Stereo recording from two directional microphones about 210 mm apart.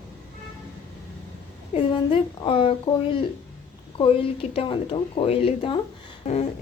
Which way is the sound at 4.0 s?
25° left (ahead or behind).